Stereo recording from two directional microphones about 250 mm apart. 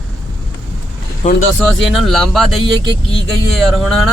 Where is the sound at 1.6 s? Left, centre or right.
Centre.